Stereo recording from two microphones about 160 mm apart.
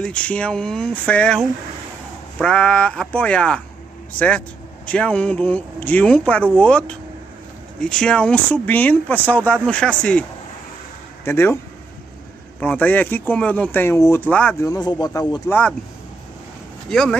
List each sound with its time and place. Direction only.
0.0 s speech: 5° left (ahead or behind)
11.2 s speech: 15° left (ahead or behind)
12.5 s speech: 10° left (ahead or behind)
14.6 s speech: 25° left (ahead or behind)
16.9 s speech: 5° left (ahead or behind)